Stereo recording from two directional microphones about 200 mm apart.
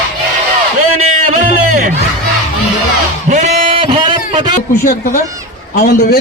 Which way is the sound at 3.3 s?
35° right (ahead or behind).